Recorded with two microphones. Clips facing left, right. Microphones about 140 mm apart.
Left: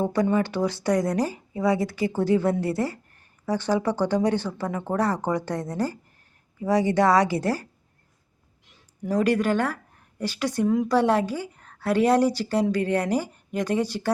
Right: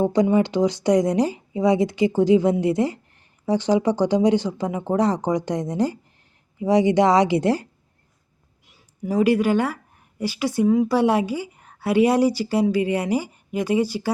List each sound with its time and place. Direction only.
0.0 s a woman's voice: 20° right (ahead or behind)
8.6 s speech: 10° right (ahead or behind)